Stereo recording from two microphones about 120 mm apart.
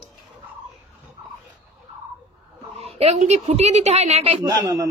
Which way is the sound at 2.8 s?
60° right (ahead or behind).